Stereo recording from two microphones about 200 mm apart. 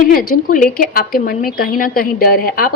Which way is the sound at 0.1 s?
45° left (ahead or behind).